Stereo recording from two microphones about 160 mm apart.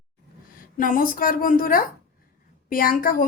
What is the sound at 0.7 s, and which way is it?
A woman's voice, 55° left (ahead or behind).